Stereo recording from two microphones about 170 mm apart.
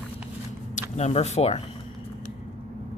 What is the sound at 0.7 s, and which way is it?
Speech, 40° left (ahead or behind).